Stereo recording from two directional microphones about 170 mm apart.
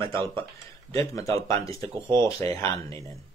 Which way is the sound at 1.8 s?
30° right (ahead or behind).